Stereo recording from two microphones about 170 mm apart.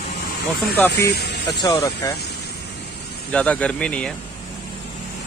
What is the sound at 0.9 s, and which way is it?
Speech, 75° left (ahead or behind).